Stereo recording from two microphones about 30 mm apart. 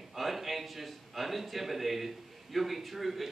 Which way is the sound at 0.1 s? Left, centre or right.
Centre.